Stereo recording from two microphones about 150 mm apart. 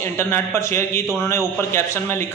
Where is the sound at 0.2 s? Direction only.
15° left (ahead or behind).